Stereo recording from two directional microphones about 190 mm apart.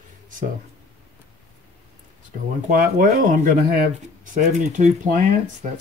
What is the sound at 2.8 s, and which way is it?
A man's voice, 45° right (ahead or behind).